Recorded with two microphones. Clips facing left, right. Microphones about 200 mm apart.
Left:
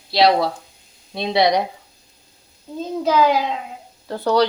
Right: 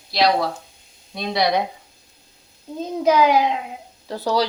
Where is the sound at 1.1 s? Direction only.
25° left (ahead or behind).